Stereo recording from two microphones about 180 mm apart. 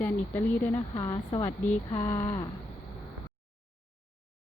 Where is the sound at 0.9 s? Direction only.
25° left (ahead or behind).